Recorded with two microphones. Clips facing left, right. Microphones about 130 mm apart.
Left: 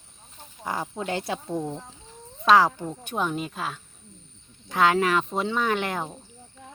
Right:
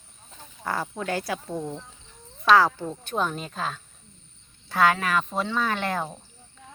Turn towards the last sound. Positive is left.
turn(degrees=15)  # may be behind; listen again after turning